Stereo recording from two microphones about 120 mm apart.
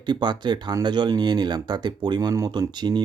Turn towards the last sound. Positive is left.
turn(degrees=-35)  # may be behind; listen again after turning